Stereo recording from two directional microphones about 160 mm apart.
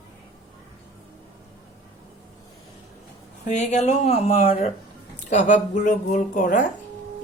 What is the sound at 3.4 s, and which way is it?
A woman's voice, 45° left (ahead or behind).